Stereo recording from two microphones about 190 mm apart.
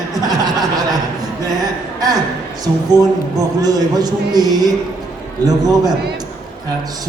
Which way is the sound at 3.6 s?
20° right (ahead or behind).